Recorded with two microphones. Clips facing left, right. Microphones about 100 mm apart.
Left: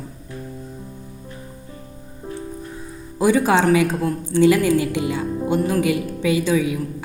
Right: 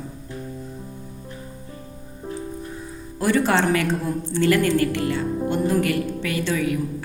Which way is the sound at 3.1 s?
10° left (ahead or behind).